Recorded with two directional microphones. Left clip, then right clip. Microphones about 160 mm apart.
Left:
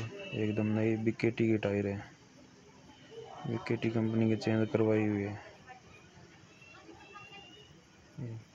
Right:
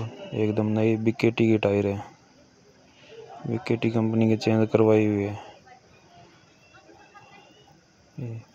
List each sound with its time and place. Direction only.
0.3 s speech: 45° right (ahead or behind)
3.6 s speech: 45° right (ahead or behind)